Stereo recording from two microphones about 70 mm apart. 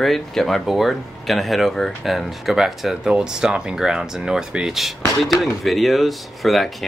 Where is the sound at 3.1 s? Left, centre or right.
Centre.